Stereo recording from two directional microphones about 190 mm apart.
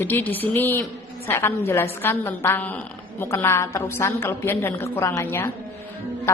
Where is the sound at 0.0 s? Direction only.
10° left (ahead or behind).